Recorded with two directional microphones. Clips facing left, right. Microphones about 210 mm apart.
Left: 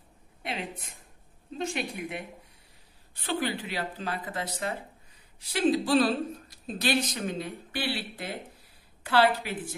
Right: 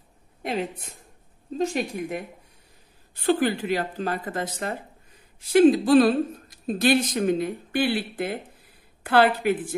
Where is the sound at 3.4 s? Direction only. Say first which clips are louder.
Right 7 dB; 45° right (ahead or behind).